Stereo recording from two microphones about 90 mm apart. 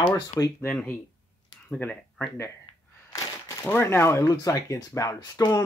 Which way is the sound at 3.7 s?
25° left (ahead or behind).